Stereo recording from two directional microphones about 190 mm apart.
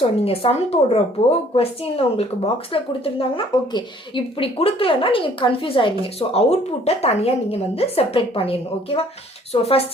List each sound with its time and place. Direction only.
0.3 s speech: 30° left (ahead or behind)